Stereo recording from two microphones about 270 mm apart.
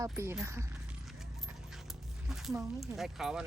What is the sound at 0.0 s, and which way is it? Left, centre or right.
Speech, centre.